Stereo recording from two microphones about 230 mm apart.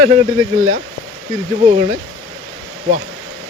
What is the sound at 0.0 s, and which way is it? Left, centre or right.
Speech, right.